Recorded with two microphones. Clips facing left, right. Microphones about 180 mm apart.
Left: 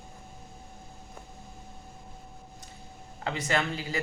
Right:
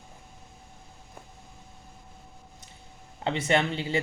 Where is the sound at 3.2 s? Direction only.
25° right (ahead or behind).